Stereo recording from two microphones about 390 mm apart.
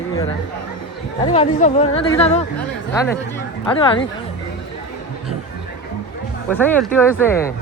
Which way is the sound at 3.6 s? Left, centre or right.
Centre.